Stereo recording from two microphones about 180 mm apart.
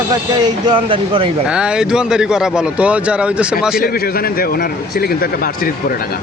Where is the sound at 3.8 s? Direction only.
55° left (ahead or behind).